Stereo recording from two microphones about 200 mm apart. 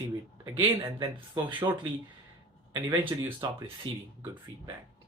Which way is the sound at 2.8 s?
10° right (ahead or behind).